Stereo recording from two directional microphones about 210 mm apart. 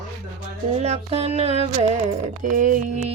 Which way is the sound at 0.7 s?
30° right (ahead or behind).